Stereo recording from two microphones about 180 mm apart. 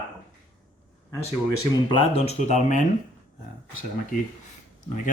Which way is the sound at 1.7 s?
30° left (ahead or behind).